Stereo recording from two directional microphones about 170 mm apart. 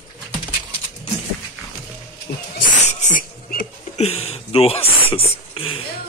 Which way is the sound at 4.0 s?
35° left (ahead or behind).